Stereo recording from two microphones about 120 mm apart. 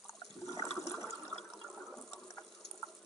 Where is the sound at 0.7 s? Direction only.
25° left (ahead or behind).